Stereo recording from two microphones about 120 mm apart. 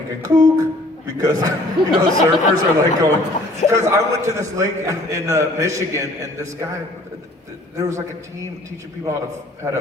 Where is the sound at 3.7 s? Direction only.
25° right (ahead or behind).